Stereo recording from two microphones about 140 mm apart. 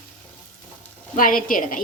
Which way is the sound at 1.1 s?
80° left.